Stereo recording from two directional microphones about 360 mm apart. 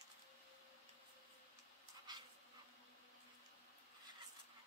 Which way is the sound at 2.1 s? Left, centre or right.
Centre.